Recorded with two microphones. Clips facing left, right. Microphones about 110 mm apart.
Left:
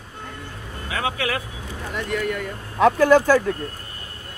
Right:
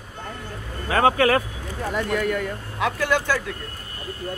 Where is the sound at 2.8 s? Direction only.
40° left (ahead or behind).